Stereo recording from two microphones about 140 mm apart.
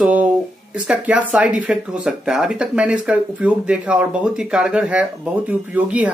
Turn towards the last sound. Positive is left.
turn(degrees=-10)  # may be behind; listen again after turning